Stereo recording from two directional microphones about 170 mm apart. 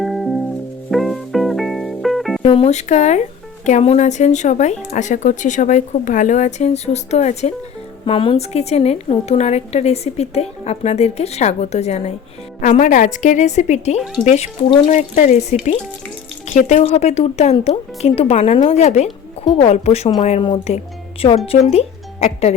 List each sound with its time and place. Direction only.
0.0 s music: centre (ahead or behind)
2.4 s a woman's voice: 35° left (ahead or behind)
20.4 s a woman's voice: 30° left (ahead or behind)